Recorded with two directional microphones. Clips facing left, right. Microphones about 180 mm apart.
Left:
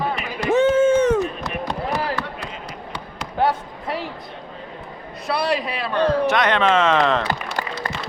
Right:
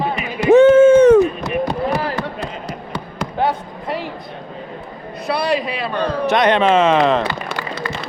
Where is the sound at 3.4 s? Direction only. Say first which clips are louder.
Even; centre (ahead or behind).